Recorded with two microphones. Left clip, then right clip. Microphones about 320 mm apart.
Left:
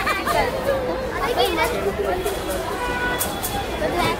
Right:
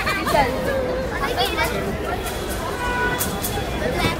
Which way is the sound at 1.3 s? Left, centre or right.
Left.